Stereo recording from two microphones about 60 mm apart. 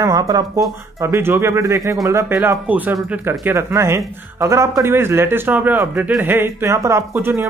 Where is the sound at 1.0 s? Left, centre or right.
Right.